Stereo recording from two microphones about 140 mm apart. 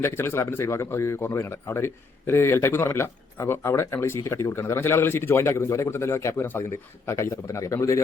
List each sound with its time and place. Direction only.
0.0 s a man's voice: 15° left (ahead or behind)